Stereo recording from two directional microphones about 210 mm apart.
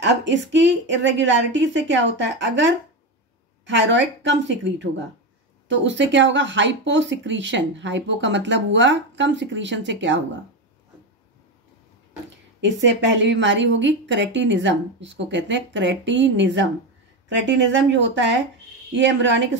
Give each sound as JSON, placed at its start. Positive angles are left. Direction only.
{"t": 0.0, "sound": "speech", "side_deg": -60}
{"t": 12.8, "sound": "speech", "side_deg": -60}